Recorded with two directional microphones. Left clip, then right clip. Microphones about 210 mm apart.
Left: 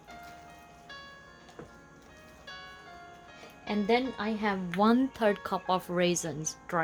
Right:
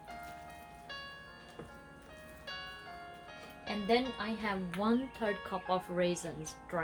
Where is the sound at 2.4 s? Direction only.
5° left (ahead or behind).